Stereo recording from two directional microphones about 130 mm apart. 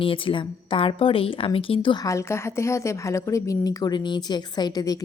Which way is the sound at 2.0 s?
20° left (ahead or behind).